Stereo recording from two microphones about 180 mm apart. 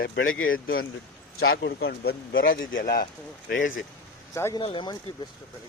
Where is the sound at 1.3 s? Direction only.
65° left (ahead or behind).